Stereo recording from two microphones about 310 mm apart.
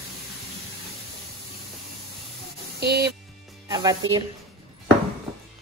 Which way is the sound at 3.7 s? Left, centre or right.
Centre.